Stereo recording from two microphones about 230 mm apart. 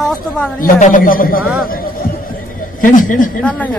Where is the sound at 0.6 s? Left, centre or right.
Left.